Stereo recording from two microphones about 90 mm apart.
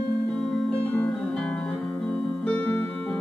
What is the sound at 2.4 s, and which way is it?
Music, 10° left (ahead or behind).